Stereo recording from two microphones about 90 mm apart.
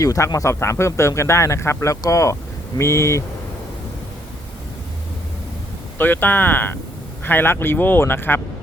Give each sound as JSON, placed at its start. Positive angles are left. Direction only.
{"t": 0.0, "sound": "speech", "side_deg": 40}
{"t": 6.0, "sound": "speech", "side_deg": 20}